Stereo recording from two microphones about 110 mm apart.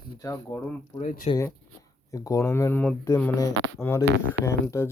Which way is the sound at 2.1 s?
30° left (ahead or behind).